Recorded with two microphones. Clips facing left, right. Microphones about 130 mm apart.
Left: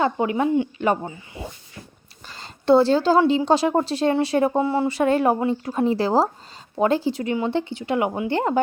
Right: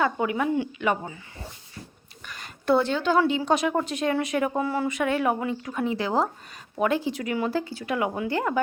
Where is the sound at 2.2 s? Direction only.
30° left (ahead or behind).